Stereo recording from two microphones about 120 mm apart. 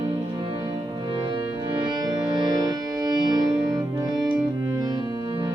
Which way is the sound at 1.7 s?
40° right (ahead or behind).